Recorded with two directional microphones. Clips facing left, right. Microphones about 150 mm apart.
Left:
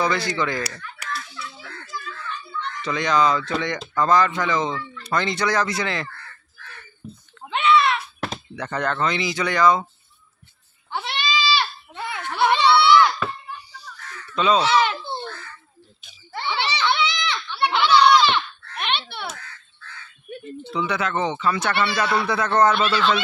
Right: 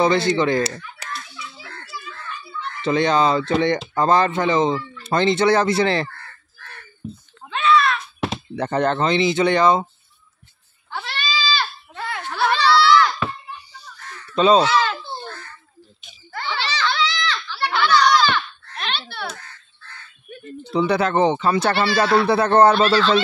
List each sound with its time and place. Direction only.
0.0 s speech: 25° right (ahead or behind)
1.3 s children playing: 5° right (ahead or behind)
2.8 s speech: 30° right (ahead or behind)
7.4 s a sound: 20° left (ahead or behind)
8.5 s speech: 30° right (ahead or behind)
10.9 s goat: 20° left (ahead or behind)
14.3 s speech: 30° right (ahead or behind)
14.7 s a sound: 20° left (ahead or behind)
16.3 s a sound: 20° left (ahead or behind)
20.7 s speech: 35° right (ahead or behind)